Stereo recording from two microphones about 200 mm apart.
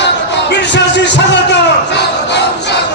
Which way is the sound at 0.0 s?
60° left (ahead or behind).